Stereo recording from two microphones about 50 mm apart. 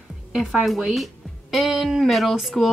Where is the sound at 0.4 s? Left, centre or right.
Centre.